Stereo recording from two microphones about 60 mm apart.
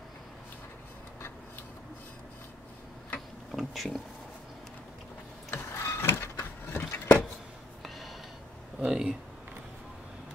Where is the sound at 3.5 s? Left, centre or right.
Centre.